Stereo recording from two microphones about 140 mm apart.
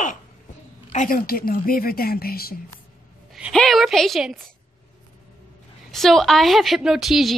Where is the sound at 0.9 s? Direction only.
75° left (ahead or behind); by 2.6 s 90° left.